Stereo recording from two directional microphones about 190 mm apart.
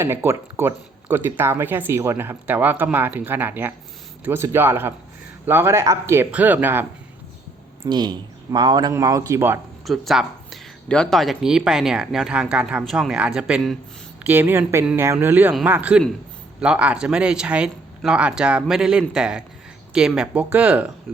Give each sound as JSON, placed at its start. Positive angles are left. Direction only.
{"t": 0.0, "sound": "speech", "side_deg": -15}
{"t": 7.9, "sound": "speech", "side_deg": -20}
{"t": 9.8, "sound": "speech", "side_deg": 0}